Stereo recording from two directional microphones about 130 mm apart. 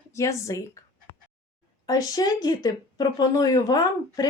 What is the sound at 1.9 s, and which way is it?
Speech, 30° left (ahead or behind).